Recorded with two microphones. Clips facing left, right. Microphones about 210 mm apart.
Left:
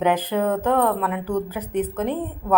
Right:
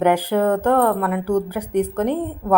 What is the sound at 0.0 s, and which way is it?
A woman's voice, 10° right (ahead or behind).